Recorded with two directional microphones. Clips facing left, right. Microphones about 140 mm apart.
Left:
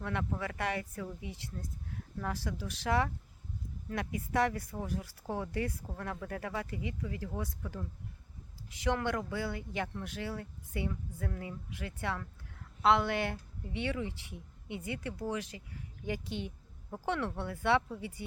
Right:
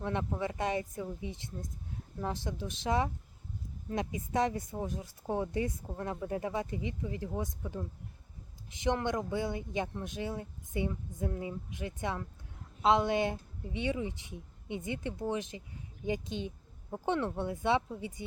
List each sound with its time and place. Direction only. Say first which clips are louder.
0.0 s speech: right 2 dB; 20° right (ahead or behind)